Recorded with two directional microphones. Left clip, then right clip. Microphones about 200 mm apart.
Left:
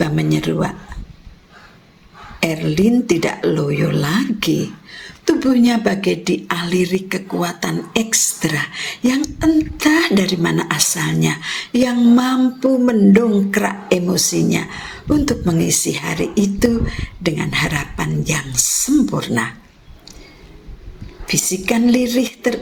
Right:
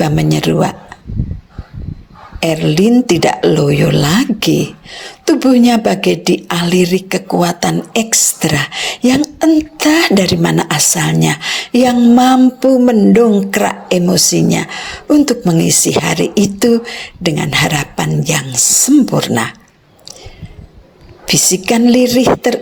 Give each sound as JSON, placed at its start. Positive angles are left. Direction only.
{"t": 0.0, "sound": "speech", "side_deg": -40}
{"t": 2.4, "sound": "speech", "side_deg": -40}
{"t": 21.2, "sound": "speech", "side_deg": -45}